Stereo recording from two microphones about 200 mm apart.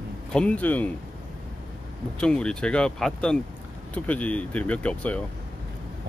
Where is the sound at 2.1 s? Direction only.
5° left (ahead or behind).